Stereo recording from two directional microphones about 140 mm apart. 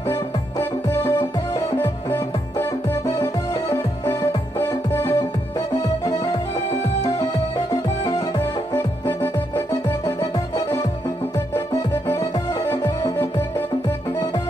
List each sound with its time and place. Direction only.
0.1 s music: 20° left (ahead or behind)
7.0 s music: 30° left (ahead or behind)
9.2 s music: 20° left (ahead or behind)